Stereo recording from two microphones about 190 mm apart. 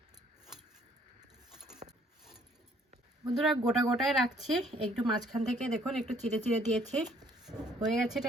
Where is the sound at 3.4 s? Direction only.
Centre (ahead or behind).